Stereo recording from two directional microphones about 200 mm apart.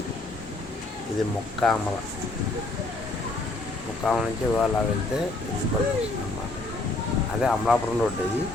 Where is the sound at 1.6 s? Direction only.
Centre (ahead or behind).